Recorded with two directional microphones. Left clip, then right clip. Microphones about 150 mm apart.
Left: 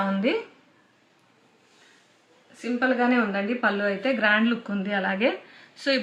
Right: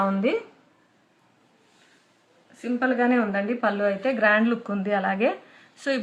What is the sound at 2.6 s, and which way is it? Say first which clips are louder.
A woman's voice: even; 15° right (ahead or behind).